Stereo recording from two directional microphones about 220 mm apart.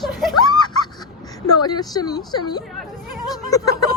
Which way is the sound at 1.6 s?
20° left (ahead or behind).